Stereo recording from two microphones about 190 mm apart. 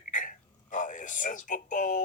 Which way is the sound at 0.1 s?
45° left (ahead or behind).